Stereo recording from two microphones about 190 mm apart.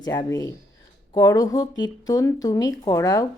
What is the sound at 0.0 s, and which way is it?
Speech, 20° left (ahead or behind).